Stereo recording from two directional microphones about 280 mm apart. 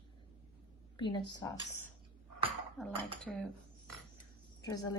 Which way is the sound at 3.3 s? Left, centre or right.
Centre.